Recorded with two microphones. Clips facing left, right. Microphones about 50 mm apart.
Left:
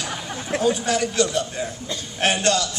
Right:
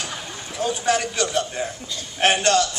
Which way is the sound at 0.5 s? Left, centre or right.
Left.